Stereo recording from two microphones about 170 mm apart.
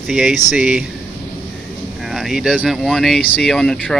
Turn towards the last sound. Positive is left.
turn(degrees=5)  # may be behind; listen again after turning